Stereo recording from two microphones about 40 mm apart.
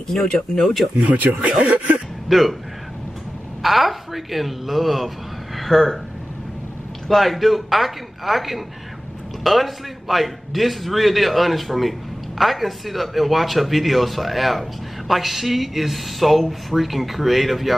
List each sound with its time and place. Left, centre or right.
0.1 s speech: centre
1.1 s speech: right
1.6 s throat clearing: right
2.2 s a man's voice: centre
3.6 s a man's voice: centre
7.1 s a man's voice: centre